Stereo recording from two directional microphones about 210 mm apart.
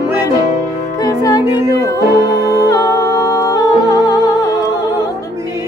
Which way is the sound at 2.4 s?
20° left (ahead or behind).